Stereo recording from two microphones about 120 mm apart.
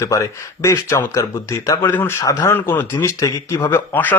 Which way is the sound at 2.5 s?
15° left (ahead or behind).